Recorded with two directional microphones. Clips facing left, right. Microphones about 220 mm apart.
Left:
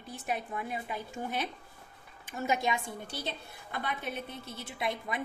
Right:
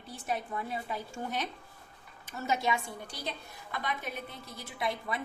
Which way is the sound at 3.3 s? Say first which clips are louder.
Even; 30° left (ahead or behind).